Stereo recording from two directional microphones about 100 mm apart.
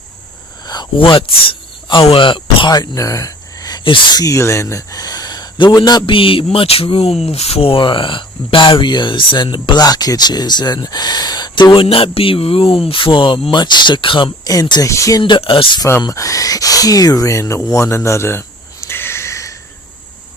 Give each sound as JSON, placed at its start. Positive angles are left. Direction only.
{"t": 0.6, "sound": "speech", "side_deg": 45}
{"t": 3.8, "sound": "speech", "side_deg": 60}
{"t": 4.2, "sound": "speech", "side_deg": 30}
{"t": 14.4, "sound": "speech", "side_deg": 40}
{"t": 15.2, "sound": "speech", "side_deg": 60}
{"t": 16.0, "sound": "speech", "side_deg": 35}
{"t": 18.9, "sound": "a sound", "side_deg": 25}